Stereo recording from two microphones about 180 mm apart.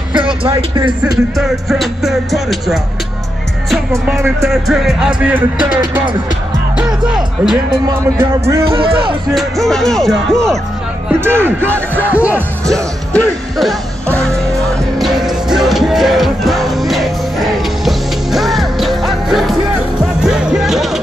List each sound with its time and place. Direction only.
0.1 s speech: 25° right (ahead or behind)
1.3 s speech: centre (ahead or behind)
4.0 s speech: 5° right (ahead or behind)
6.8 s speech: 5° right (ahead or behind)
8.0 s a man's voice: 15° right (ahead or behind)
8.7 s speech: 30° right (ahead or behind)
9.3 s speech: centre (ahead or behind)
11.1 s a man's voice: 15° right (ahead or behind)
11.9 s speech: 10° left (ahead or behind)
12.2 s a man's voice: 10° right (ahead or behind)
15.0 s music: centre (ahead or behind)